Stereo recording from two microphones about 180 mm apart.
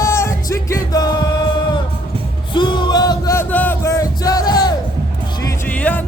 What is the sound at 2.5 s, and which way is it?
Music, 25° left (ahead or behind).